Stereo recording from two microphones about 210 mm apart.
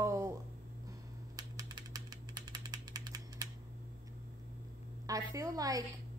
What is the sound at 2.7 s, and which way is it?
Ratchet, 15° right (ahead or behind).